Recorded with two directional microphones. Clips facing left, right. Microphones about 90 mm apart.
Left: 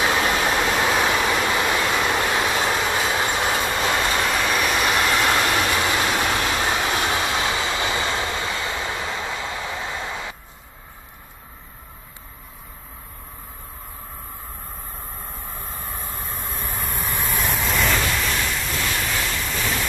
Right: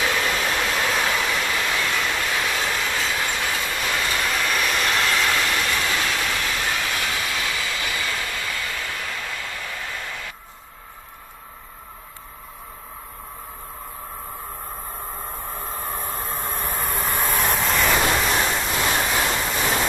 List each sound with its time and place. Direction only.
0.0 s vehicle: 25° left (ahead or behind)
5.4 s train: 30° left (ahead or behind)
16.0 s train: 40° right (ahead or behind)
16.6 s vehicle: 15° right (ahead or behind)
17.3 s vehicle: centre (ahead or behind)
18.2 s a sound: 30° right (ahead or behind)
19.2 s waves: 30° right (ahead or behind)